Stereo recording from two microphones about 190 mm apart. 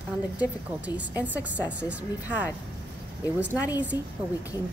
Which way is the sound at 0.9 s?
10° right (ahead or behind).